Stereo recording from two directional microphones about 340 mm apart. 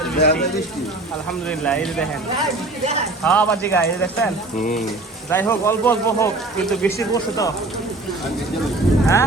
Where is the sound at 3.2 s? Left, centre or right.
Centre.